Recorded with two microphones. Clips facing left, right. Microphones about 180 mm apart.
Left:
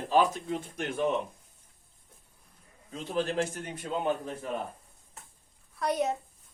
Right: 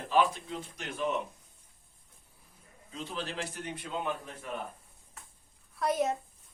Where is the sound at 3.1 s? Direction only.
50° left (ahead or behind).